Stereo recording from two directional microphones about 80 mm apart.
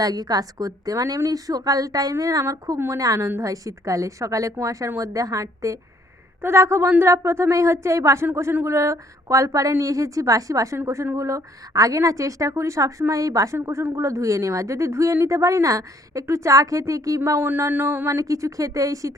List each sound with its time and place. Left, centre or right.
0.0 s a woman's voice: right
13.6 s a woman's voice: right
18.2 s a woman's voice: right